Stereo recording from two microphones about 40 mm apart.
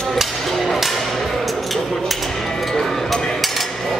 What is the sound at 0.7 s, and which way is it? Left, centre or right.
Music, centre.